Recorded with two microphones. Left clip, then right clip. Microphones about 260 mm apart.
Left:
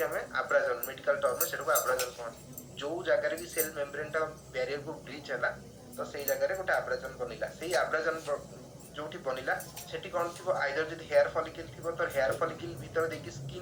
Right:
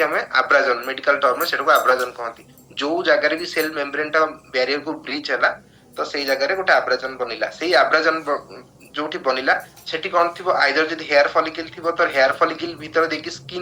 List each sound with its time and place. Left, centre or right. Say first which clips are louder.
0.0 s speech: right 14 dB; right